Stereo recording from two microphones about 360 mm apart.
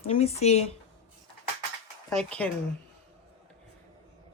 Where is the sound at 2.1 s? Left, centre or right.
Centre.